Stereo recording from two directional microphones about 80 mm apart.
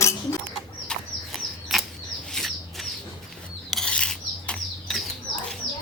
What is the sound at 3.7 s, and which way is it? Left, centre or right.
Mechanisms, centre.